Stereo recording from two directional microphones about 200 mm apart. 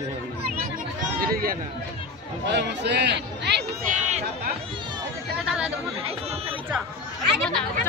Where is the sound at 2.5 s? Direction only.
60° right (ahead or behind).